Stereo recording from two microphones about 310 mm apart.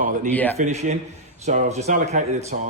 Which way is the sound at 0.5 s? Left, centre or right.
Right.